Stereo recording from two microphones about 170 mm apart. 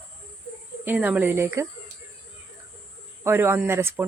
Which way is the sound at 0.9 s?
10° right (ahead or behind).